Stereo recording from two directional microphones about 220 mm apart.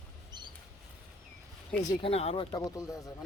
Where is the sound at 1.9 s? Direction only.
25° left (ahead or behind).